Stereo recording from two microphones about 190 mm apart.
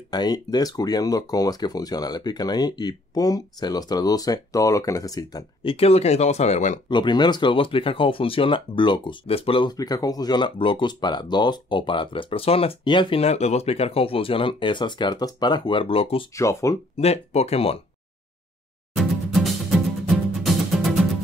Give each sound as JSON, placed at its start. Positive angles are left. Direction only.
{"t": 0.1, "sound": "speech", "side_deg": 20}
{"t": 6.9, "sound": "speech", "side_deg": 25}
{"t": 16.3, "sound": "speech", "side_deg": 15}
{"t": 17.0, "sound": "speech", "side_deg": 35}
{"t": 18.9, "sound": "music", "side_deg": 0}